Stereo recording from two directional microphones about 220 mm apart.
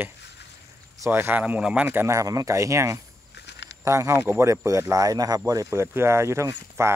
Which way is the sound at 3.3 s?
50° left (ahead or behind).